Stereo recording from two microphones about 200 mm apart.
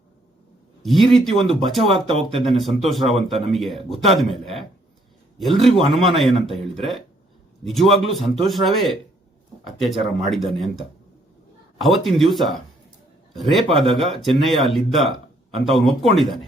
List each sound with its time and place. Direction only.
0.8 s a man's voice: centre (ahead or behind)
2.0 s speech: 30° right (ahead or behind)
2.4 s speech: centre (ahead or behind)
11.8 s speech: centre (ahead or behind)